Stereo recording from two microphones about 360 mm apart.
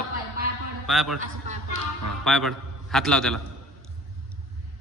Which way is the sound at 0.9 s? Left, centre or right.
Centre.